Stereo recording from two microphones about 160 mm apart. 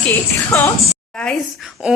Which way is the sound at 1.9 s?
5° right (ahead or behind).